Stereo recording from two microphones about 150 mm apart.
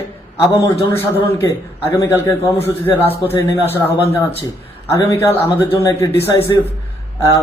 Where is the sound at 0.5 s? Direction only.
20° left (ahead or behind).